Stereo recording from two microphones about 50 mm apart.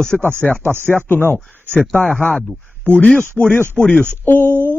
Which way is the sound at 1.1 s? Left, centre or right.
Left.